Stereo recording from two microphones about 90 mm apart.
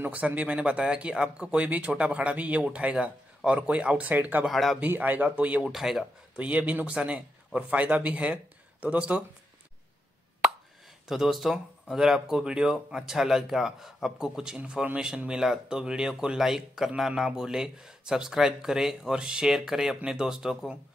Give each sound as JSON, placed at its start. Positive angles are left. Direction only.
{"t": 0.0, "sound": "speech", "side_deg": -20}
{"t": 4.5, "sound": "speech", "side_deg": 0}
{"t": 4.7, "sound": "speech", "side_deg": -20}
{"t": 5.6, "sound": "speech", "side_deg": -5}
{"t": 6.3, "sound": "speech", "side_deg": -15}
{"t": 11.1, "sound": "speech", "side_deg": -5}